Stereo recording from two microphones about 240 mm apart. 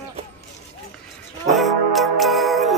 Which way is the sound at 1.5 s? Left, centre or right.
Centre.